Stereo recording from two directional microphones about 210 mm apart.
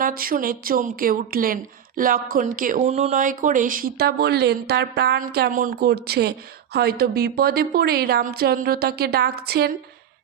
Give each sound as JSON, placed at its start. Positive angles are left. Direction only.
{"t": 0.0, "sound": "speech", "side_deg": -45}